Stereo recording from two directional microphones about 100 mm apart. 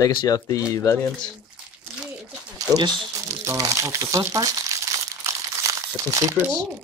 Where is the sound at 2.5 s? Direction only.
40° right (ahead or behind).